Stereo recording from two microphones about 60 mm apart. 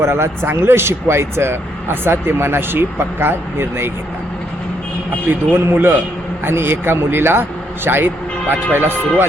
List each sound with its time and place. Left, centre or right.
0.0 s speech: right
5.3 s speech: right